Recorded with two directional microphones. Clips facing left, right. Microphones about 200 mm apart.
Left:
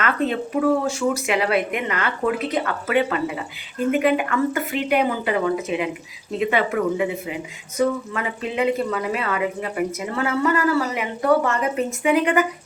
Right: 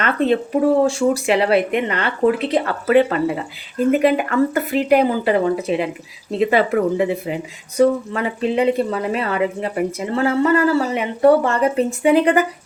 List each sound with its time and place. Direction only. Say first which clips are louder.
0.0 s speech: right 5 dB; 30° right (ahead or behind)